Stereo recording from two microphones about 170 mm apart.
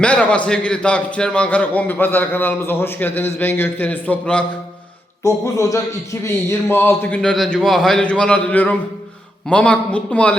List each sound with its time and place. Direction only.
0.0 s a man's voice: 5° left (ahead or behind)
5.2 s a man's voice: 20° left (ahead or behind)